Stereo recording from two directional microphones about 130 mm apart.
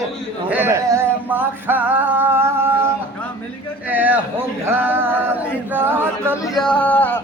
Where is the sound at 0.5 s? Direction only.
20° right (ahead or behind).